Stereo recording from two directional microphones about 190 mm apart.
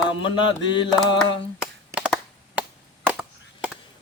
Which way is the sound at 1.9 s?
5° right (ahead or behind).